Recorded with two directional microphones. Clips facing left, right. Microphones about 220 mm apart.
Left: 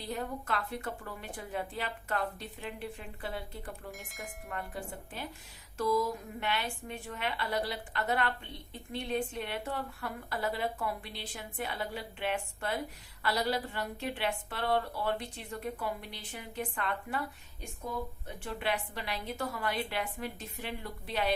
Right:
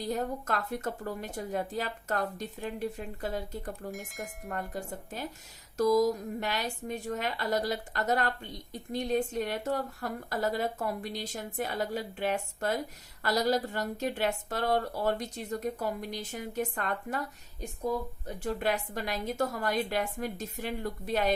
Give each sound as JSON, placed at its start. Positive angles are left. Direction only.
{"t": 0.0, "sound": "a woman's voice", "side_deg": -45}
{"t": 3.9, "sound": "speech", "side_deg": 0}
{"t": 4.4, "sound": "a woman's voice", "side_deg": -40}